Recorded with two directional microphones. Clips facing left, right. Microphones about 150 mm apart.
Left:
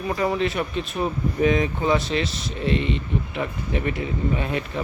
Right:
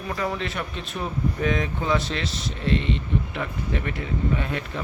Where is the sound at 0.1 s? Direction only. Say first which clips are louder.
Left 5 dB; 15° left (ahead or behind).